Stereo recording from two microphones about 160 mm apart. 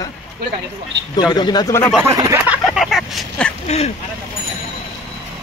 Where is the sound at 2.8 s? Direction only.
Centre (ahead or behind).